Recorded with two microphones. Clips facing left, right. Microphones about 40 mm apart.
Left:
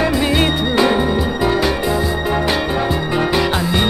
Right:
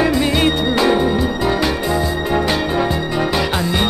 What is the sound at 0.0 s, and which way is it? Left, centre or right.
Music, centre.